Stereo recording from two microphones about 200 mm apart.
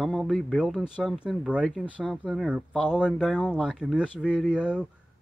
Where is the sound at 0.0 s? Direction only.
Centre (ahead or behind).